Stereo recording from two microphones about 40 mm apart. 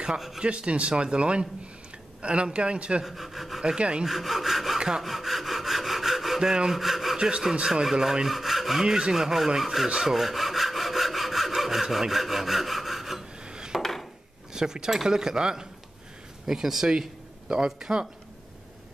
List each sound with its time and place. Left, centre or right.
0.4 s a man's voice: right
3.0 s sawing: centre
3.6 s a man's voice: right
4.0 s sawing: centre
4.7 s sawing: centre
5.0 s sawing: centre
6.5 s sawing: centre
6.8 s sawing: centre
7.2 s speech: right
7.6 s sawing: centre
13.7 s a sound: centre
14.5 s sawing: centre
16.4 s speech: centre